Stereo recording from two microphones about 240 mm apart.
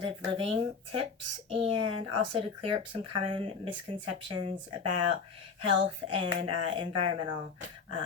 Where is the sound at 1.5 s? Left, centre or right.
Right.